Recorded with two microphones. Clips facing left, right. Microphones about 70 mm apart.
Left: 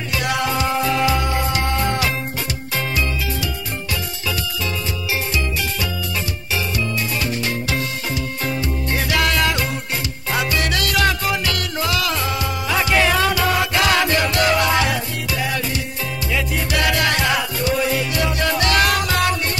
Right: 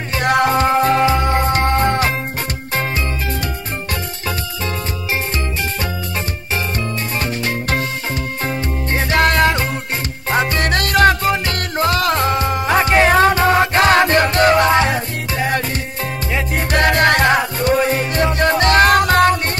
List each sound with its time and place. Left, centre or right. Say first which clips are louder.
0.1 s music: right 7 dB; right
7.2 s music: right 2 dB; right